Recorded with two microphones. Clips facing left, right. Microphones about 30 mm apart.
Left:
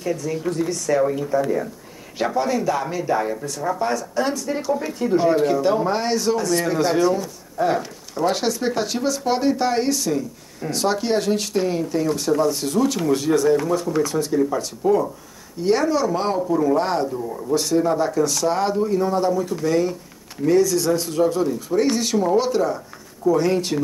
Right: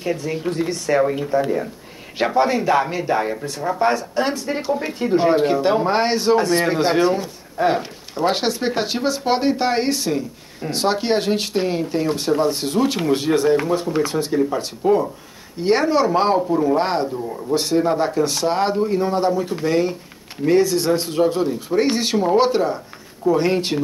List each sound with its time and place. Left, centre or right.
0.0 s speech: right